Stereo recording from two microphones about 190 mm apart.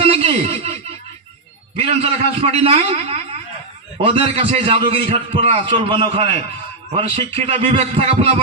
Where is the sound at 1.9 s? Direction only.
30° right (ahead or behind).